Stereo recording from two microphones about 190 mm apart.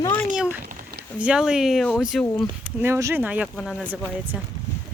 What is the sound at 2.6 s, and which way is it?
Speech, 15° right (ahead or behind).